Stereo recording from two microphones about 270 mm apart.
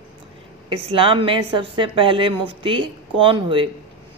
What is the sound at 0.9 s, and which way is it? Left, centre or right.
A woman's voice, centre.